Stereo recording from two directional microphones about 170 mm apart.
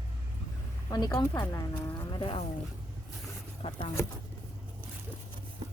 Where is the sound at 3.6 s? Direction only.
30° left (ahead or behind).